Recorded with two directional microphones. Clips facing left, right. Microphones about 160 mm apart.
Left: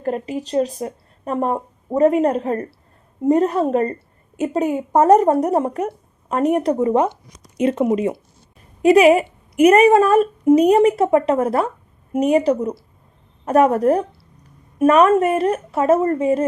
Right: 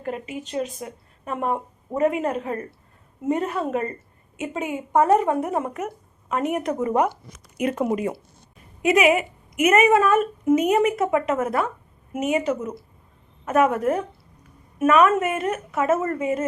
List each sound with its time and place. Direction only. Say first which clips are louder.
0.0 s a woman's voice: left 7 dB; 40° left (ahead or behind)
8.8 s a woman's voice: left 7 dB; 35° left (ahead or behind)